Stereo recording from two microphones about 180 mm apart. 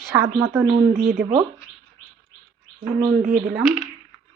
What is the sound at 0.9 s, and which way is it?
Speech, 55° right (ahead or behind).